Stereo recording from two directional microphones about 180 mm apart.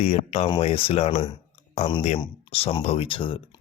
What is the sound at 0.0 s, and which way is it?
Speech, 35° left (ahead or behind).